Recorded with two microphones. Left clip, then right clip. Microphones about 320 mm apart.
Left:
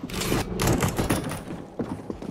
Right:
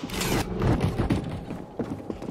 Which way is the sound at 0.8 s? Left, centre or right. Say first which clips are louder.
Left 3 dB; left.